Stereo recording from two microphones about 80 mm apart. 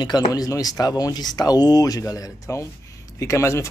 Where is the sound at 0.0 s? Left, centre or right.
Left.